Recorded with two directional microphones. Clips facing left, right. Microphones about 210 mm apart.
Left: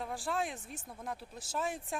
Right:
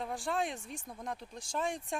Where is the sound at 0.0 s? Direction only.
Centre (ahead or behind).